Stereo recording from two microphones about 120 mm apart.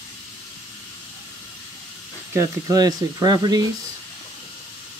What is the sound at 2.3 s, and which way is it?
Speech, 30° right (ahead or behind).